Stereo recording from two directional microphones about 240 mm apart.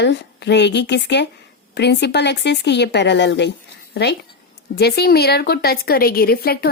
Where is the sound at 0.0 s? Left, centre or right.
Left.